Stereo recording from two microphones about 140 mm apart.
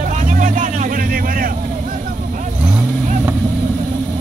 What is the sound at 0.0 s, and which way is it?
Vehicle, 65° right (ahead or behind).